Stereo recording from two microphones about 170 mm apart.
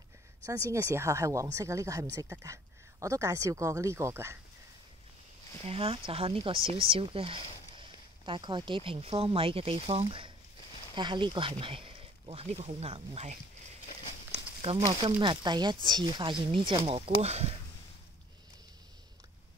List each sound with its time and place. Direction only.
0.7 s speech: 15° right (ahead or behind)
5.6 s speech: 35° right (ahead or behind)